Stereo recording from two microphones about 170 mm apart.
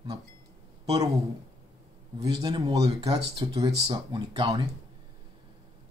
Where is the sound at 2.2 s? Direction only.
25° right (ahead or behind).